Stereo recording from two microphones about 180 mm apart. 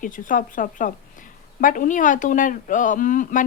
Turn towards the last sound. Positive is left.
turn(degrees=50)  # may be behind; listen again after turning